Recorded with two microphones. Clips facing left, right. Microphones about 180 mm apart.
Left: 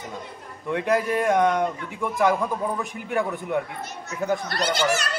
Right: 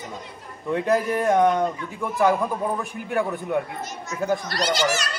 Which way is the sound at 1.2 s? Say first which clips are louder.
Right 3 dB; 10° right (ahead or behind).